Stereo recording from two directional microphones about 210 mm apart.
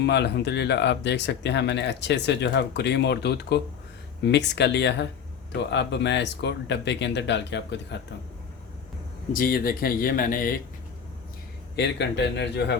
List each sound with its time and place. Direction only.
0.0 s speech: 55° left (ahead or behind)
9.3 s speech: 45° left (ahead or behind)
11.8 s speech: 55° left (ahead or behind)